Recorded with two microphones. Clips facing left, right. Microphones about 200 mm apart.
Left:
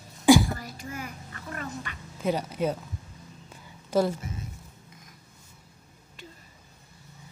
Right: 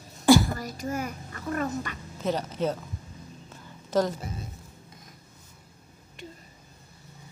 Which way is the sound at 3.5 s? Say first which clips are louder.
Even; 10° left (ahead or behind).